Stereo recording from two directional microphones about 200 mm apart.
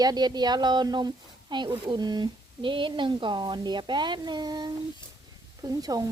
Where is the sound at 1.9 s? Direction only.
20° right (ahead or behind).